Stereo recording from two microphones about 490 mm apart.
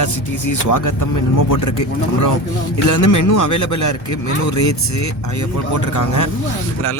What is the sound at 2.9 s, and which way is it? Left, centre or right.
Speech, left.